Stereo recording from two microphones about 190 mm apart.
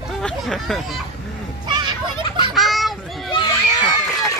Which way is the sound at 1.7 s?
25° right (ahead or behind).